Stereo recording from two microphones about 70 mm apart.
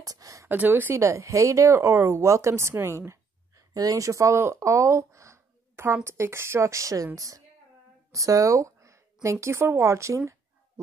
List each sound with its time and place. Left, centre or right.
0.0 s speech: right
0.5 s a woman's voice: right
1.0 s speech: right
3.1 s a sound: right
6.0 s a woman's voice: right